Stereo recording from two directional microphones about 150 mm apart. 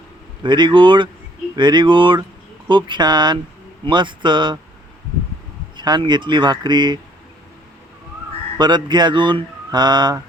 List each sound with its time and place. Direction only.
0.4 s speech: 30° right (ahead or behind)
5.7 s speech: 30° right (ahead or behind)
8.5 s speech: 30° right (ahead or behind)